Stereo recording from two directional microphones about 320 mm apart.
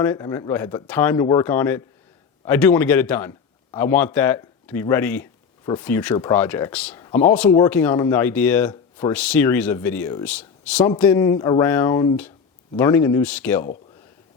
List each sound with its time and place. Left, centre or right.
0.0 s a man's voice: centre